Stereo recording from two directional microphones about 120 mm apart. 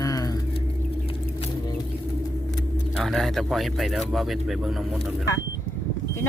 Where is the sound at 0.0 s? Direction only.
30° left (ahead or behind).